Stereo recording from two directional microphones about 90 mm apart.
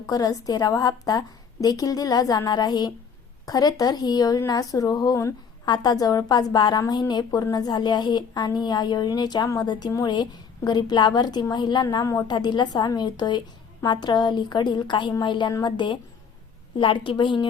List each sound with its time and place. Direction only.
0.0 s a woman's voice: 40° left (ahead or behind)
5.6 s a woman's voice: 50° left (ahead or behind)
16.7 s a woman's voice: 70° left (ahead or behind)